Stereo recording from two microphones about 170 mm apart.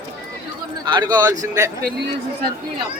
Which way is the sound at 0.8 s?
25° right (ahead or behind).